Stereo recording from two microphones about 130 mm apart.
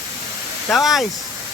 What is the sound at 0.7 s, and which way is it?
Speech, centre (ahead or behind).